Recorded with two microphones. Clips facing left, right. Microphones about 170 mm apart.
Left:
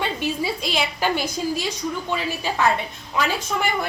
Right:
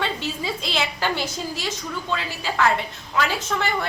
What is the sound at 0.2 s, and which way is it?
A woman's voice, 15° left (ahead or behind).